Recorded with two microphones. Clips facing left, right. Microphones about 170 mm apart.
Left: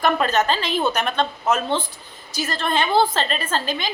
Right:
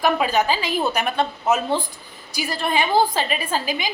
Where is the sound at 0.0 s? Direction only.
10° right (ahead or behind).